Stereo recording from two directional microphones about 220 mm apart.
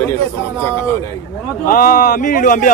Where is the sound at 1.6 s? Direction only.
40° left (ahead or behind).